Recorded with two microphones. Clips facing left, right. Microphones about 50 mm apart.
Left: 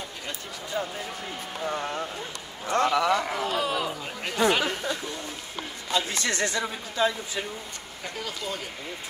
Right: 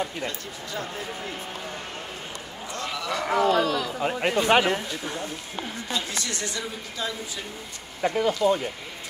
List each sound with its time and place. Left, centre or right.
0.8 s speech: centre
2.7 s speech: left
3.3 s speech: centre
3.6 s a man's voice: left
4.0 s speech: right
5.9 s speech: left
8.0 s speech: right